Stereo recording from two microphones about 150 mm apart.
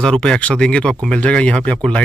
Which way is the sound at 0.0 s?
5° left (ahead or behind).